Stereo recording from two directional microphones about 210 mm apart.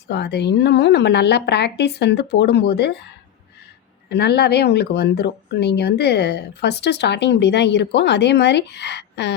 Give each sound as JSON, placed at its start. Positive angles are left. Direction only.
{"t": 0.1, "sound": "speech", "side_deg": 55}
{"t": 4.1, "sound": "speech", "side_deg": 50}